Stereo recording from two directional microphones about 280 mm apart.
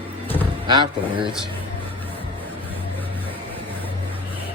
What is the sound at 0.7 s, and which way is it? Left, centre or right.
Speech, centre.